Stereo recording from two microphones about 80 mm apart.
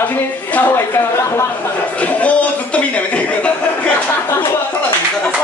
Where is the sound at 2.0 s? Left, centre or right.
Centre.